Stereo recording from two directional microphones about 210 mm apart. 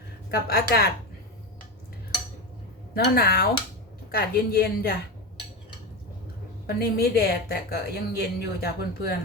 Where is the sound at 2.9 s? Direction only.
45° left (ahead or behind).